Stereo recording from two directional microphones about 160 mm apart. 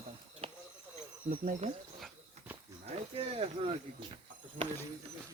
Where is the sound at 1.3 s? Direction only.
50° right (ahead or behind).